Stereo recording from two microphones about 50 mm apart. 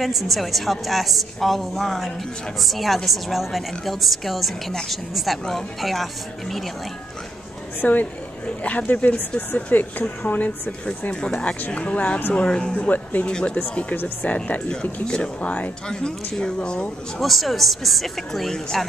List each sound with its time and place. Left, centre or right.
0.0 s a woman's voice: centre
7.8 s speech: left
11.1 s speech: centre
12.7 s speech: left
13.3 s speech: centre
13.6 s speech: left
17.2 s a woman's voice: centre